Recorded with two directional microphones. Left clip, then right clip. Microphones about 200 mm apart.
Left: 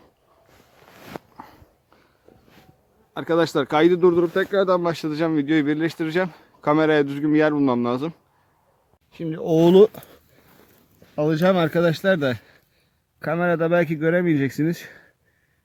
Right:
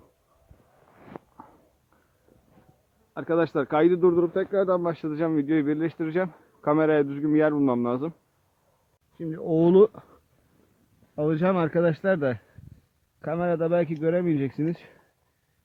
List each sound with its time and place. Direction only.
1.1 s a sound: 15° left (ahead or behind)
3.2 s speech: 10° left (ahead or behind)
9.1 s speech: 20° left (ahead or behind)
11.1 s speech: 15° left (ahead or behind)